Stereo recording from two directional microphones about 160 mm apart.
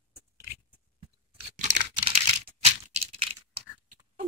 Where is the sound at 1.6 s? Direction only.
45° right (ahead or behind).